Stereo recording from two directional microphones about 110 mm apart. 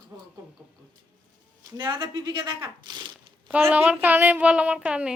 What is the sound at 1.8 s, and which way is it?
Speech, 40° right (ahead or behind).